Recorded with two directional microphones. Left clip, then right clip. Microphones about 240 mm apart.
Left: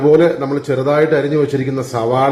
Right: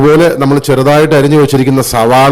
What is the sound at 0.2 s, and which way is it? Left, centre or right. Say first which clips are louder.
A man's voice: right 6 dB; right.